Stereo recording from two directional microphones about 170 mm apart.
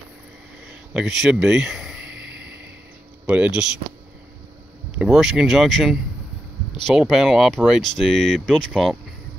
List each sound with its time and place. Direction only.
0.9 s a sound: centre (ahead or behind)
3.3 s speech: 10° right (ahead or behind)
4.9 s speech: 5° right (ahead or behind)